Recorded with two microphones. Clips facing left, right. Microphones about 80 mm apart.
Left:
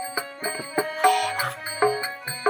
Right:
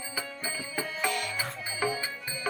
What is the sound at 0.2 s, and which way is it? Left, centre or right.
Music, left.